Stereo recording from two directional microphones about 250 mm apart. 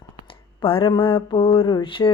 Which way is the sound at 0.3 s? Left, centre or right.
Left.